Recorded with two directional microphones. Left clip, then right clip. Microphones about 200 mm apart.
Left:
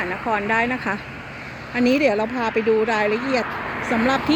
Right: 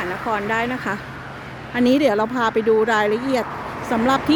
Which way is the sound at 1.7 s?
15° right (ahead or behind).